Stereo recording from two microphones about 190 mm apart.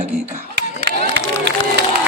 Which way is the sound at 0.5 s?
60° right (ahead or behind).